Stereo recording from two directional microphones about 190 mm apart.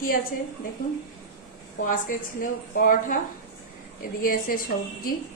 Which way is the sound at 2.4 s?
45° left (ahead or behind).